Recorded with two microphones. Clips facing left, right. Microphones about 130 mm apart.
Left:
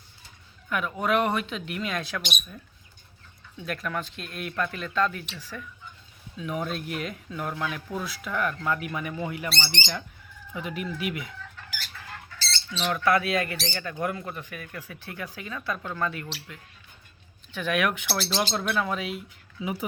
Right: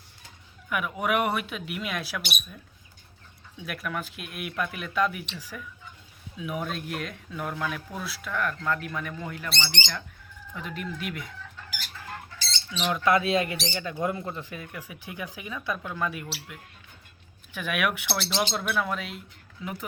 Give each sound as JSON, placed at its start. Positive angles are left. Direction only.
{"t": 0.7, "sound": "speech", "side_deg": -10}
{"t": 3.7, "sound": "speech", "side_deg": -5}
{"t": 12.4, "sound": "speech", "side_deg": -15}
{"t": 14.7, "sound": "speech", "side_deg": -10}
{"t": 18.1, "sound": "speech", "side_deg": 5}